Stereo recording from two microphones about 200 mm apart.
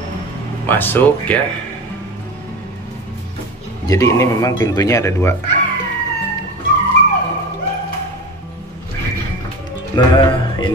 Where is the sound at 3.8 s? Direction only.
15° left (ahead or behind).